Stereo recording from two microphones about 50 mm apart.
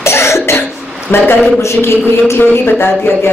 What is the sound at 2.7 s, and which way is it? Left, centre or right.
Speech, left.